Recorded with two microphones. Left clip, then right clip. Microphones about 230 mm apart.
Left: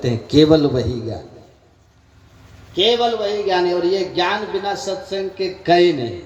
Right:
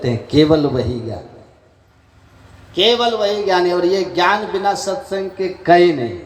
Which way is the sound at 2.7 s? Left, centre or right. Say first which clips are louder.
Right 2 dB; centre.